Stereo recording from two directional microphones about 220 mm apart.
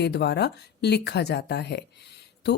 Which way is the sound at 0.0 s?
50° left (ahead or behind).